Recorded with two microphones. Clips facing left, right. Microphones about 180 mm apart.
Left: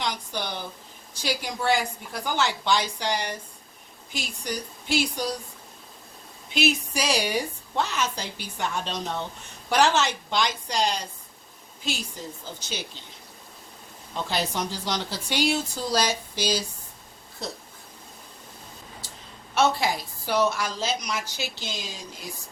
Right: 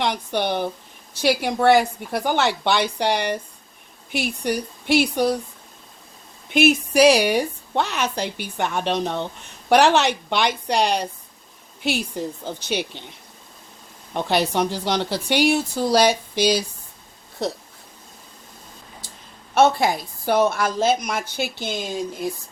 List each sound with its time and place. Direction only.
0.0 s a woman's voice: 60° right (ahead or behind)
6.5 s a woman's voice: 55° right (ahead or behind)
14.1 s a woman's voice: 65° right (ahead or behind)
19.5 s a woman's voice: 50° right (ahead or behind)